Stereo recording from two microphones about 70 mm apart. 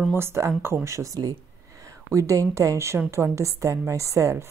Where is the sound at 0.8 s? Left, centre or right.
Right.